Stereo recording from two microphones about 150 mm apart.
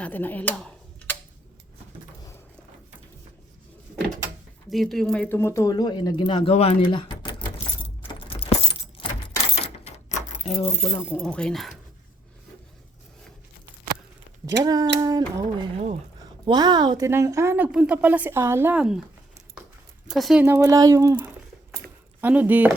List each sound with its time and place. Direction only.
0.0 s a sound: 10° left (ahead or behind)
4.7 s speech: centre (ahead or behind); by 7.4 s 30° left (ahead or behind)
8.0 s keys jangling: 40° left (ahead or behind)
9.8 s keys jangling: 55° left (ahead or behind)
11.2 s speech: 5° left (ahead or behind)
14.4 s speech: 25° right (ahead or behind)
18.8 s speech: 5° right (ahead or behind)
20.1 s speech: 5° right (ahead or behind)
20.4 s speech: 20° right (ahead or behind)